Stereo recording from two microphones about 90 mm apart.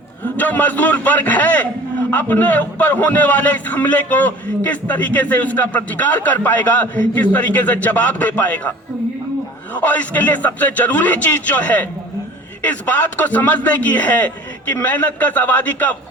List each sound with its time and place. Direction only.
0.3 s a man's voice: 20° left (ahead or behind)
9.7 s a man's voice: 15° left (ahead or behind)